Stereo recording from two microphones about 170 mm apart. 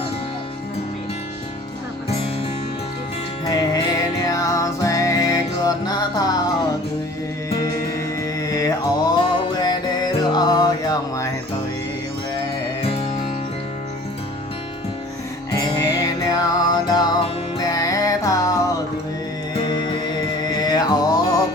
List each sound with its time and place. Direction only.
3.5 s music: 20° left (ahead or behind)
7.9 s music: 20° left (ahead or behind)
12.8 s music: 35° left (ahead or behind)
15.9 s music: 20° left (ahead or behind)